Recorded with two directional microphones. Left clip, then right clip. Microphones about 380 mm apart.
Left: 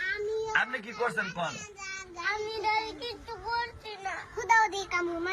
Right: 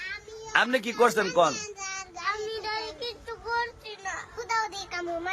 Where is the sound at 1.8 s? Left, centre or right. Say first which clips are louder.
Right 3 dB; centre.